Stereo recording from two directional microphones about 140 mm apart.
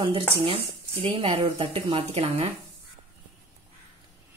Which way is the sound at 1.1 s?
40° right (ahead or behind).